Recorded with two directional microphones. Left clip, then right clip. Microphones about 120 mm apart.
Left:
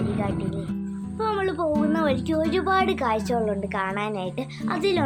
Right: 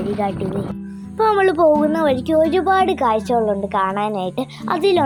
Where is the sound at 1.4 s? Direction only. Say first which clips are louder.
Right 11 dB; 60° right (ahead or behind).